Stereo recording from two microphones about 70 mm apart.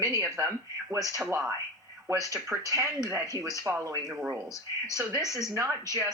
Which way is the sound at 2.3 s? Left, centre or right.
Right.